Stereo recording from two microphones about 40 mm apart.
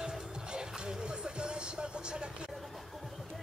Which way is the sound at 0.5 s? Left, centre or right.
Centre.